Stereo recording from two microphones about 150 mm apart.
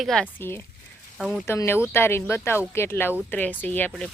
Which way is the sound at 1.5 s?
15° left (ahead or behind).